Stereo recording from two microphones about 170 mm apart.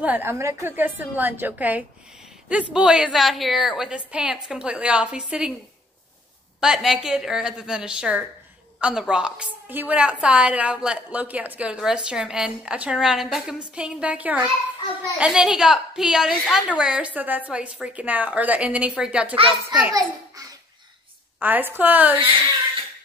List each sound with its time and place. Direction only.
0.0 s a woman's voice: 10° right (ahead or behind)
6.6 s a woman's voice: 5° right (ahead or behind)
19.9 s a child's voice: 20° right (ahead or behind)